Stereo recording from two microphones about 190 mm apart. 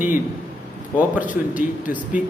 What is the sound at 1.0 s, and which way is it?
A man's voice, 10° right (ahead or behind).